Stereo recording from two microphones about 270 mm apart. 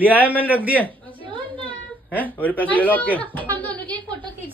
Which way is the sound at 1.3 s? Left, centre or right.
Centre.